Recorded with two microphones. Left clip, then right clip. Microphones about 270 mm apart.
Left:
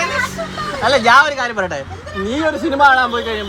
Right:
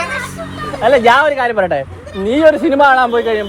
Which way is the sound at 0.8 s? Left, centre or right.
Centre.